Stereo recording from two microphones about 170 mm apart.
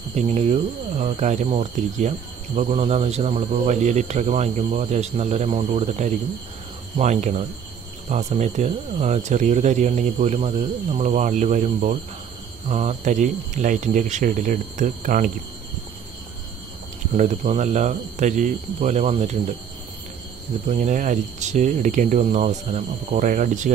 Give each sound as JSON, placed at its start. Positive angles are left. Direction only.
{"t": 0.1, "sound": "speech", "side_deg": -40}
{"t": 17.2, "sound": "speech", "side_deg": -40}
{"t": 20.6, "sound": "speech", "side_deg": -45}